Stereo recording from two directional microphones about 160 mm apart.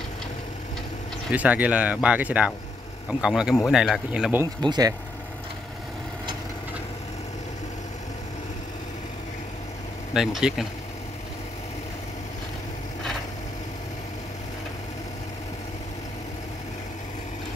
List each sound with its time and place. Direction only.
1.3 s speech: 10° right (ahead or behind)
4.6 s speech: 25° right (ahead or behind)
10.1 s speech: centre (ahead or behind)